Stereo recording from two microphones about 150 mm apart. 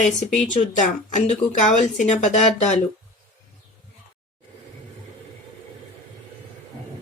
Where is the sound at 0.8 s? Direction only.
50° left (ahead or behind).